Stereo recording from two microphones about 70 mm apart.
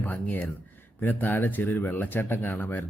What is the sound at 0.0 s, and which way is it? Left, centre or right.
Speech, left.